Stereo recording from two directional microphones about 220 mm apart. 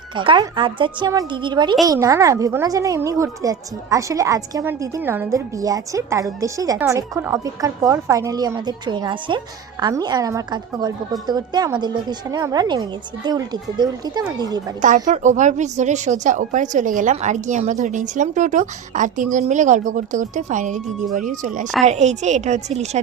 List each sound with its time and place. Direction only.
0.2 s a woman's voice: 20° right (ahead or behind)
14.8 s a woman's voice: 35° right (ahead or behind)